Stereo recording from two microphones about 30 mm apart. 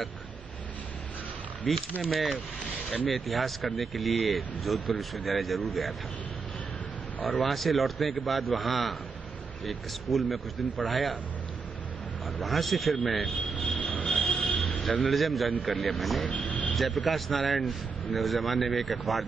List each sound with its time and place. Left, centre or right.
1.7 s speech: centre
7.2 s speech: centre
12.4 s speech: centre
13.7 s music: left
14.0 s music: left
14.5 s a sound: left
15.0 s speech: centre
16.3 s vehicle: left
16.7 s speech: centre